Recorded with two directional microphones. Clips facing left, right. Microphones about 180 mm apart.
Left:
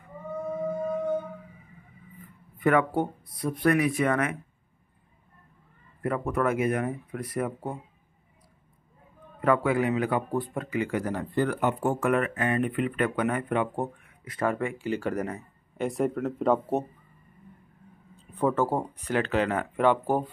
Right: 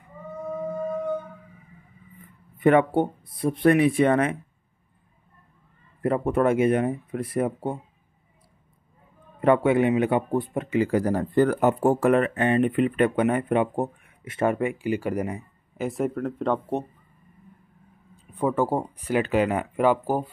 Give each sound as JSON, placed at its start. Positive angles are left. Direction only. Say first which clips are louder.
{"t": 2.6, "sound": "speech", "louder": "right 5 dB", "side_deg": -25}
{"t": 6.0, "sound": "speech", "louder": "right 5 dB", "side_deg": -30}
{"t": 9.4, "sound": "speech", "louder": "right 5 dB", "side_deg": -25}
{"t": 15.9, "sound": "speech", "louder": "right 1 dB", "side_deg": 0}
{"t": 18.1, "sound": "speech", "louder": "right 1 dB", "side_deg": -10}